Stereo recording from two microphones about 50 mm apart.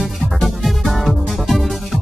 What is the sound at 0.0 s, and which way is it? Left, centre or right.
Music, centre.